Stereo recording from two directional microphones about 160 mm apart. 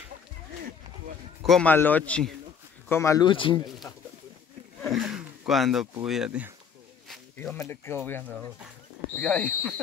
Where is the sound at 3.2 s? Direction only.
30° left (ahead or behind).